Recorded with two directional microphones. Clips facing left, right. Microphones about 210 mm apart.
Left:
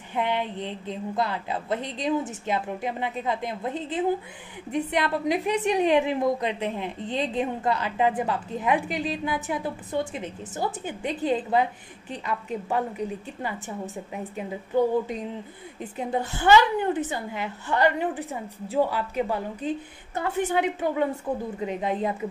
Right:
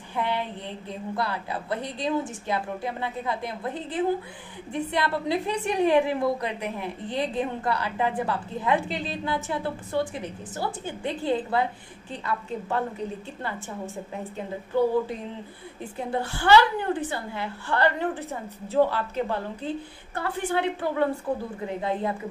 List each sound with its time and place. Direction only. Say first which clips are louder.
0.1 s a woman's voice: left 2 dB; 20° left (ahead or behind)
16.0 s a woman's voice: left 1 dB; 20° left (ahead or behind)